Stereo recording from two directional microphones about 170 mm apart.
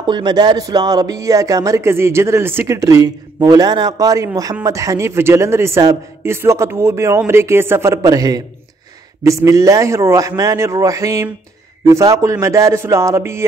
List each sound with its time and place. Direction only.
0.0 s a man's voice: 25° right (ahead or behind)